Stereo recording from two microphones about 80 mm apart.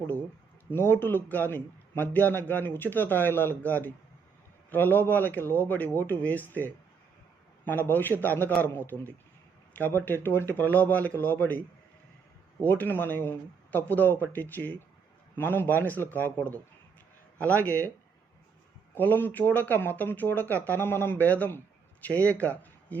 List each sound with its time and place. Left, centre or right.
0.7 s speech: left
12.6 s speech: left
17.4 s speech: centre
18.9 s speech: left